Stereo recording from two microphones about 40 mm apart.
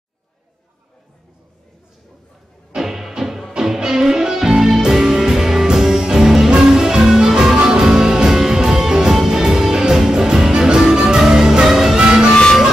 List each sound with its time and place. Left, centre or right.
2.7 s music: centre
12.0 s music: right